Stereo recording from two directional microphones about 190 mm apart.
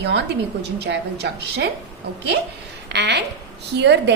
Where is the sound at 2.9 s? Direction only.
60° right (ahead or behind).